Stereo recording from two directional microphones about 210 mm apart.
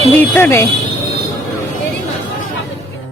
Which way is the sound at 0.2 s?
10° left (ahead or behind).